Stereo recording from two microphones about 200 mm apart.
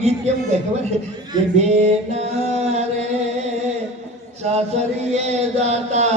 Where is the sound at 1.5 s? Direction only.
35° right (ahead or behind).